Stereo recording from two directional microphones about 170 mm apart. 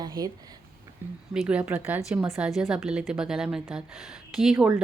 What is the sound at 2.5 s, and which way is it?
A woman's voice, 5° right (ahead or behind).